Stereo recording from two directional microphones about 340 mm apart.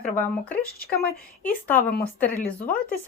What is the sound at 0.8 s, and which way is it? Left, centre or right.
Speech, left.